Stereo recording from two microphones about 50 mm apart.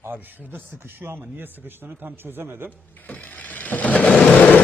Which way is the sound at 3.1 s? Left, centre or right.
Left.